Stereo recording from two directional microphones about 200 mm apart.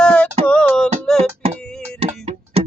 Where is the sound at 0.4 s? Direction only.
5° left (ahead or behind).